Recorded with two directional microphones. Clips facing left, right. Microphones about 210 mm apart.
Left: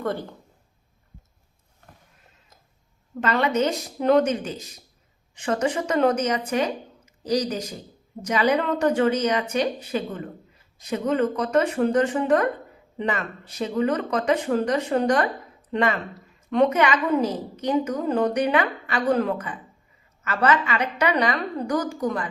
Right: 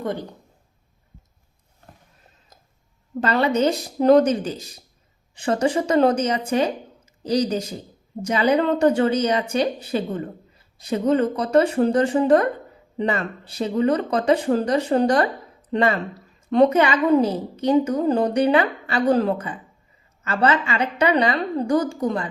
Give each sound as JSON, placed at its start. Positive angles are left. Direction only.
{"t": 0.0, "sound": "speech", "side_deg": -15}
{"t": 3.2, "sound": "a woman's voice", "side_deg": -35}